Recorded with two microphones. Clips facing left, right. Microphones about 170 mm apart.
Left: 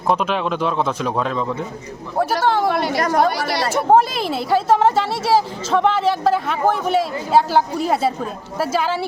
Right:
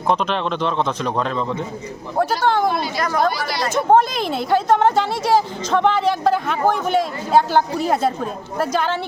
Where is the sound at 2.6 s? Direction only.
70° left (ahead or behind).